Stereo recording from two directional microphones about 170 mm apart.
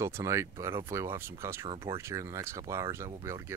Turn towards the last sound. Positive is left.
turn(degrees=-15)  # may be behind; listen again after turning